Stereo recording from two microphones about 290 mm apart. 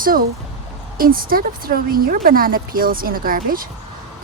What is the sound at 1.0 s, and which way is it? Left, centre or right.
Speech, right.